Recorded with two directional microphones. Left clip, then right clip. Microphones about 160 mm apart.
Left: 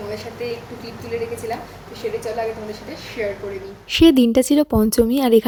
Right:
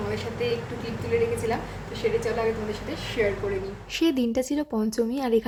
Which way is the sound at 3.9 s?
45° left (ahead or behind).